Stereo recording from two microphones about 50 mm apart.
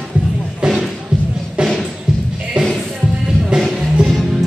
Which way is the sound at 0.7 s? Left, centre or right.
Centre.